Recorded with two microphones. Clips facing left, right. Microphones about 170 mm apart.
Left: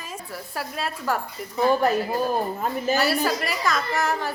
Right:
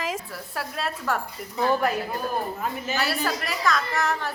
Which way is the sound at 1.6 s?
10° left (ahead or behind).